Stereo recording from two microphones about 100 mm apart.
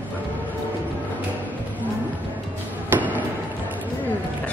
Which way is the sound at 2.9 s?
15° right (ahead or behind).